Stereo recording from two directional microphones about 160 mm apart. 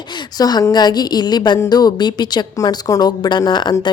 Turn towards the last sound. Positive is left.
turn(degrees=25)  # may be behind; listen again after turning